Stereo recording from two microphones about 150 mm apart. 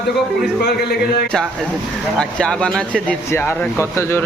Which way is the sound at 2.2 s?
5° left (ahead or behind).